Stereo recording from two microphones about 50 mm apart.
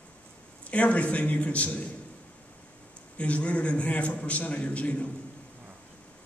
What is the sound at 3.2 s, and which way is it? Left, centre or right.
A man's voice, left.